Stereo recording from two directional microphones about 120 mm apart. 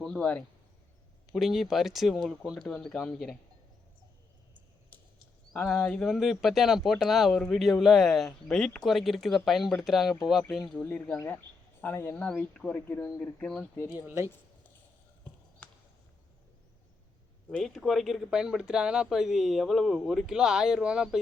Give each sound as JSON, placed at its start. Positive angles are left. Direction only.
{"t": 0.0, "sound": "speech", "side_deg": 5}
{"t": 1.3, "sound": "speech", "side_deg": -5}
{"t": 5.5, "sound": "speech", "side_deg": 5}
{"t": 10.8, "sound": "speech", "side_deg": 10}
{"t": 13.7, "sound": "speech", "side_deg": 25}
{"t": 15.6, "sound": "a sound", "side_deg": 10}
{"t": 17.6, "sound": "speech", "side_deg": 0}